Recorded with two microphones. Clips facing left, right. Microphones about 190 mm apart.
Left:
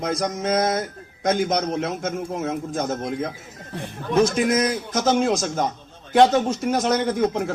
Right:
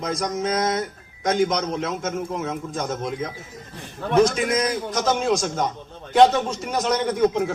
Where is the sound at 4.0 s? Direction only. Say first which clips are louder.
Right 2 dB; 60° right (ahead or behind).